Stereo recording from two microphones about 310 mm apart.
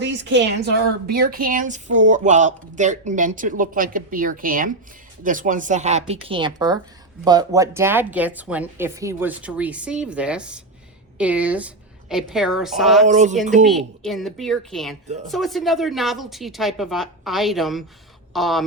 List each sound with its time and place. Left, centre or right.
0.0 s a woman's voice: right; by 13.1 s centre
13.1 s a woman's voice: right
13.7 s a woman's voice: centre